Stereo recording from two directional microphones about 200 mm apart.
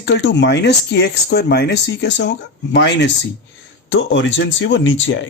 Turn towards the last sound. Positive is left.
turn(degrees=65)  # may be behind; listen again after turning